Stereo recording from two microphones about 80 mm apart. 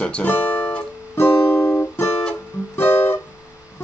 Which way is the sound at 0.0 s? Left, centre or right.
Centre.